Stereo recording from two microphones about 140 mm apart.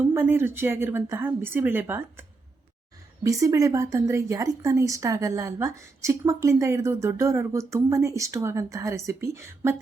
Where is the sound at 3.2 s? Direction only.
25° right (ahead or behind).